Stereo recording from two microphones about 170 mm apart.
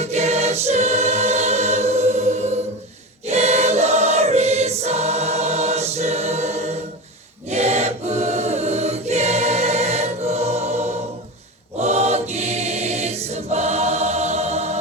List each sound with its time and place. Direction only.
0.0 s choir: 40° right (ahead or behind)